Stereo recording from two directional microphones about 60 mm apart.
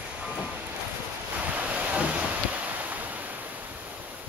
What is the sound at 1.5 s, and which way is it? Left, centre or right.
Waves, right.